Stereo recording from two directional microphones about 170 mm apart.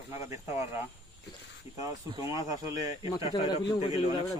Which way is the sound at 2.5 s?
20° right (ahead or behind).